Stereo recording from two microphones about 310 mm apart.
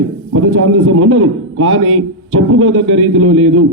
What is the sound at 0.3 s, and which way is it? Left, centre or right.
A man's voice, right.